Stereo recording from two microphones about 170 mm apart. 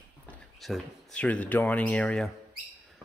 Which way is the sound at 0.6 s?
5° left (ahead or behind).